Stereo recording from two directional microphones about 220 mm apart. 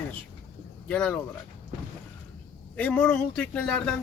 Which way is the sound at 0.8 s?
5° left (ahead or behind).